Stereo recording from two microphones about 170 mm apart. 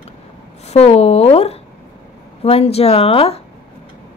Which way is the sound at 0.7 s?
35° left (ahead or behind).